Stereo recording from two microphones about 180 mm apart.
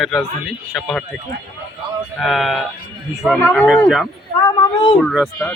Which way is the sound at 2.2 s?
Centre (ahead or behind).